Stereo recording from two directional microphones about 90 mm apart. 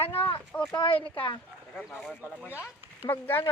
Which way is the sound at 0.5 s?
10° left (ahead or behind).